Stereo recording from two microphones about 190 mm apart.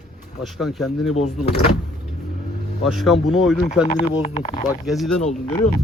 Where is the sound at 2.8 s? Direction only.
Centre (ahead or behind).